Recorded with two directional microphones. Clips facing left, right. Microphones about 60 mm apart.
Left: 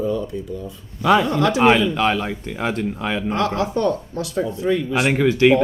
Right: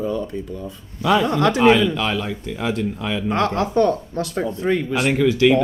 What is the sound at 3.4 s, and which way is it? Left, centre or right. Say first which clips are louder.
Speech: right 4 dB; right.